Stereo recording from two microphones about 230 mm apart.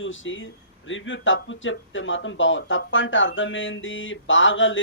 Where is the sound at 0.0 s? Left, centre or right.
Left.